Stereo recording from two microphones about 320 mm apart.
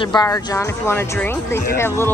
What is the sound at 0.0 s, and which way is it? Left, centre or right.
Speech, centre.